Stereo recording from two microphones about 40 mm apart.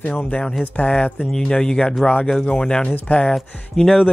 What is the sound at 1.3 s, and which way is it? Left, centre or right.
Speech, centre.